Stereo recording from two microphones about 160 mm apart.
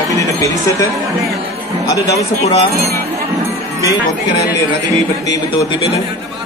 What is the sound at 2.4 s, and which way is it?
Speech, 40° left (ahead or behind).